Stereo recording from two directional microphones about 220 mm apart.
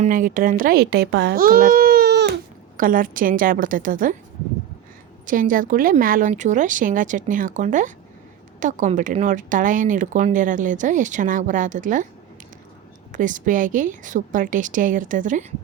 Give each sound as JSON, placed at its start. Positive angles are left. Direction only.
{"t": 0.0, "sound": "a child's voice", "side_deg": -40}
{"t": 5.2, "sound": "speech", "side_deg": -40}
{"t": 13.1, "sound": "speech", "side_deg": -35}